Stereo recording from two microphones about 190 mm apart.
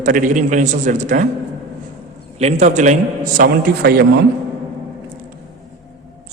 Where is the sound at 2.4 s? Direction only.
35° right (ahead or behind); by 4.1 s 55° right (ahead or behind).